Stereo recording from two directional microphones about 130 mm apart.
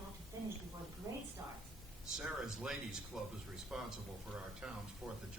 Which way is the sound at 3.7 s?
5° right (ahead or behind).